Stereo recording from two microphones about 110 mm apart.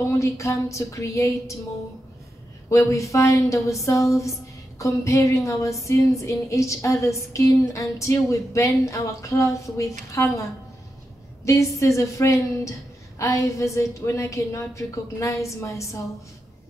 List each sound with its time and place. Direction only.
0.2 s speech: 30° left (ahead or behind)
2.7 s speech: 30° left (ahead or behind)
11.4 s speech: 30° left (ahead or behind)